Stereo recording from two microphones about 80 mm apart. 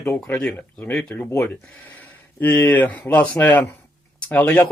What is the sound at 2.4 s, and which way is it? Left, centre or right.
Speech, left.